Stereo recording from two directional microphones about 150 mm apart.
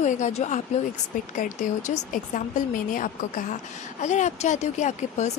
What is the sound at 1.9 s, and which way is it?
A woman's voice, 55° left (ahead or behind).